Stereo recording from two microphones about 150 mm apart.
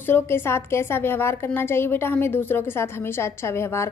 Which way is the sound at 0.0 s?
15° left (ahead or behind).